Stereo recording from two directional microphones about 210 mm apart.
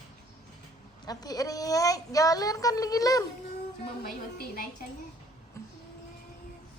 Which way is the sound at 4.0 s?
45° left (ahead or behind).